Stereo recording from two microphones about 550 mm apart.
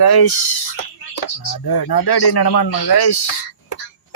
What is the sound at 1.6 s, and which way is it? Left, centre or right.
A man's voice, left.